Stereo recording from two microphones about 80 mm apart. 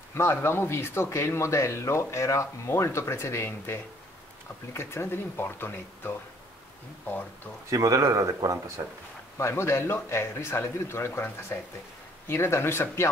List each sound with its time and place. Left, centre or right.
0.1 s speech: left
7.7 s speech: right
9.4 s speech: left